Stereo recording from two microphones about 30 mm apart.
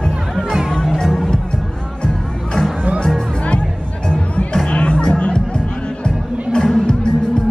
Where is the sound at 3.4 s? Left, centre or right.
Left.